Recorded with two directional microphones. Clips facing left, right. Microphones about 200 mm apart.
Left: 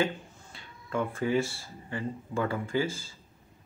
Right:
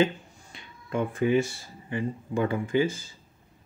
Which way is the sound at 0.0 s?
20° right (ahead or behind).